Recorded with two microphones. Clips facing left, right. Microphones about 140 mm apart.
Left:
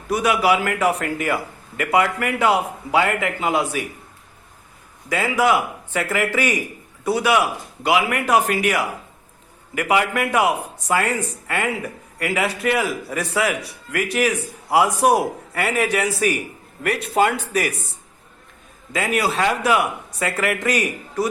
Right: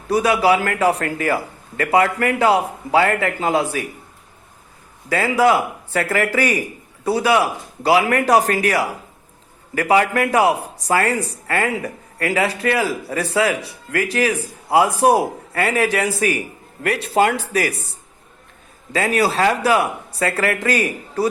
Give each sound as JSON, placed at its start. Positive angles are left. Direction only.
{"t": 0.1, "sound": "speech", "side_deg": -30}
{"t": 5.0, "sound": "speech", "side_deg": -35}